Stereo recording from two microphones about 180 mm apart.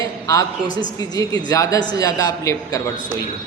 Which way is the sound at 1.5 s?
20° left (ahead or behind).